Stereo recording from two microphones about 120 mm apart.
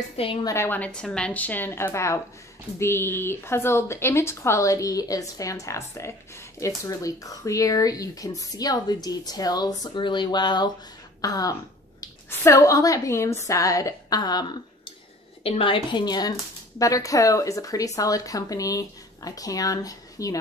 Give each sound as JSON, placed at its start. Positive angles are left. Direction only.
{"t": 0.2, "sound": "a woman's voice", "side_deg": 45}
{"t": 0.5, "sound": "speech", "side_deg": 20}
{"t": 15.4, "sound": "speech", "side_deg": 50}